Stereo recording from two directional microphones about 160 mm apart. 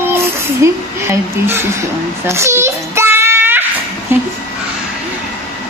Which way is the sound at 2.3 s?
15° right (ahead or behind).